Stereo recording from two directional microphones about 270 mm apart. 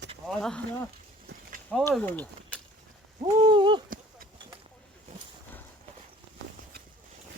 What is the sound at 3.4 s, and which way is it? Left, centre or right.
Owl, centre.